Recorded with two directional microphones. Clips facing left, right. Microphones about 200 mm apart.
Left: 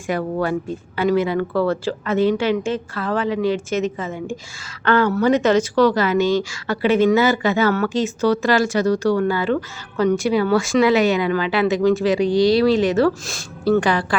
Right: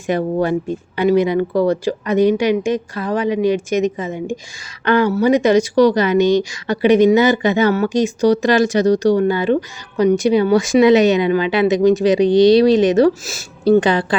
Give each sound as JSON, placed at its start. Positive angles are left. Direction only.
{"t": 0.1, "sound": "a woman's voice", "side_deg": -20}